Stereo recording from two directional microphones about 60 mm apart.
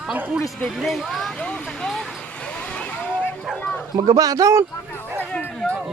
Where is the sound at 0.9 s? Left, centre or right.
Centre.